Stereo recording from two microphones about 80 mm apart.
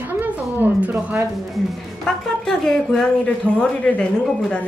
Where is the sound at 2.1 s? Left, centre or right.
Centre.